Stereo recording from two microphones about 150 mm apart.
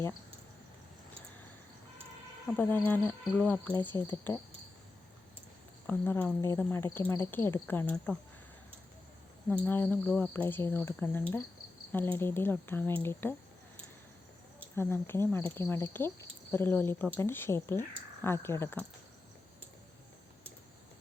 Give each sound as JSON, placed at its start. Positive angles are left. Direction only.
{"t": 2.5, "sound": "speech", "side_deg": 10}
{"t": 5.9, "sound": "speech", "side_deg": 15}
{"t": 9.5, "sound": "speech", "side_deg": 10}
{"t": 14.8, "sound": "speech", "side_deg": 15}